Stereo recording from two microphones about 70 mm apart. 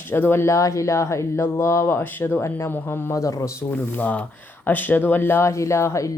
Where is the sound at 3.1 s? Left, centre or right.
Left.